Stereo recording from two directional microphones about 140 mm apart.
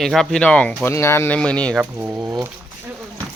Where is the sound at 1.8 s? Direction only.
15° right (ahead or behind).